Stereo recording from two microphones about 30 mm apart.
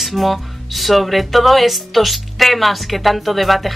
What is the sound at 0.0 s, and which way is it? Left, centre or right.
A woman's voice, centre.